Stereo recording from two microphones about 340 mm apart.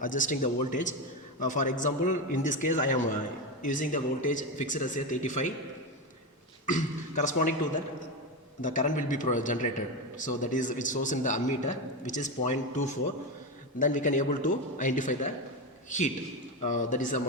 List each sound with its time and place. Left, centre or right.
0.0 s a man's voice: left
6.7 s a man's voice: left
8.6 s a man's voice: left